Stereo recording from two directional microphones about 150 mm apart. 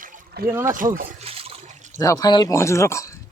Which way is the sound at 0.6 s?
65° right (ahead or behind).